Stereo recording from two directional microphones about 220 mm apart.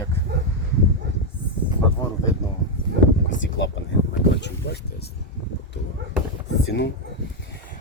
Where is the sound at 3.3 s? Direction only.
55° left (ahead or behind).